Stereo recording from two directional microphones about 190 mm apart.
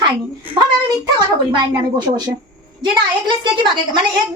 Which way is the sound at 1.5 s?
25° right (ahead or behind).